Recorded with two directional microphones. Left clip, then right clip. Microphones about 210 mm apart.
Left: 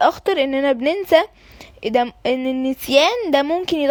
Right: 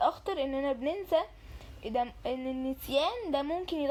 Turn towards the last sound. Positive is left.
turn(degrees=45)  # may be behind; listen again after turning